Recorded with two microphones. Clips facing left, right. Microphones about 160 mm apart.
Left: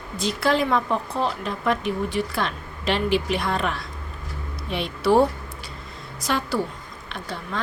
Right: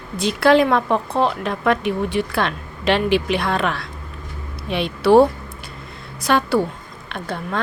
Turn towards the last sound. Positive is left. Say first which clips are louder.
# right 5 dB
turn(degrees=-55)  # may be behind; listen again after turning